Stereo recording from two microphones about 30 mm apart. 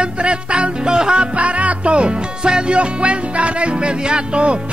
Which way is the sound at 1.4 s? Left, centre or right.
Right.